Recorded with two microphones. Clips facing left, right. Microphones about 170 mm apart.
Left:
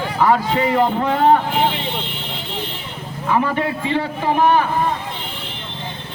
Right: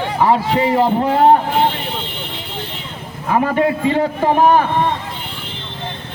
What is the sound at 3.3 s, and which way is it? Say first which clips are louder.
A man's voice: right 4 dB; 45° right (ahead or behind).